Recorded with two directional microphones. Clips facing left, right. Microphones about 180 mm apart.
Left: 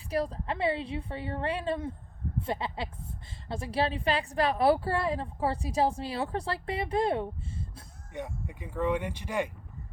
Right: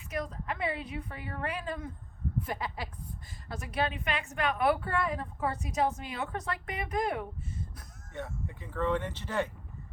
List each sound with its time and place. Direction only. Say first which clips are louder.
0.1 s a woman's voice: left 5 dB; 30° left (ahead or behind)
8.1 s speech: left 2 dB; 15° left (ahead or behind)